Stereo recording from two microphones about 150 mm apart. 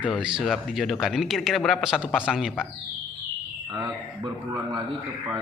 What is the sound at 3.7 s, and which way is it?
Speech, 30° right (ahead or behind).